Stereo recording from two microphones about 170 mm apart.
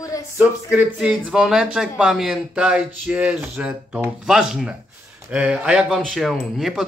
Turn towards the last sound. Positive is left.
turn(degrees=0)  # may be behind; listen again after turning